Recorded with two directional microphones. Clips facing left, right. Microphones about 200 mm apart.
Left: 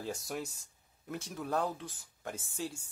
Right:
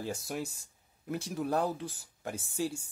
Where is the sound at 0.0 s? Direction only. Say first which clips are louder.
Right 2 dB; 5° right (ahead or behind).